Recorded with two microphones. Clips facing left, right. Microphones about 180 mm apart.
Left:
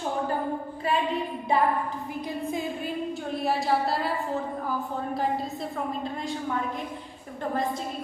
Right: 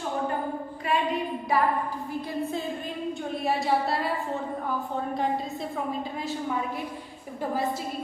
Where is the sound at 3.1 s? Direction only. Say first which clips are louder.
Right 1 dB; centre (ahead or behind).